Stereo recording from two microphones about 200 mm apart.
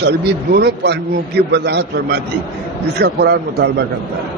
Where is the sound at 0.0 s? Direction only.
55° right (ahead or behind).